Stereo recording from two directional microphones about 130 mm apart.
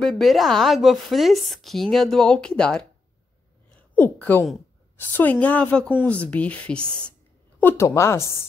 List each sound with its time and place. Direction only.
0.0 s a woman's voice: centre (ahead or behind)
3.9 s a woman's voice: 15° left (ahead or behind)
7.6 s a woman's voice: 20° left (ahead or behind)
8.2 s speech: 25° right (ahead or behind)